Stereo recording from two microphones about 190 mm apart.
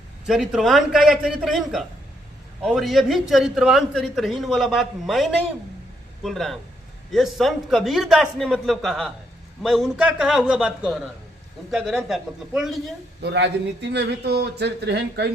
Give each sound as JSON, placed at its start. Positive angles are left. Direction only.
{"t": 0.3, "sound": "a man's voice", "side_deg": 0}
{"t": 13.2, "sound": "speech", "side_deg": -65}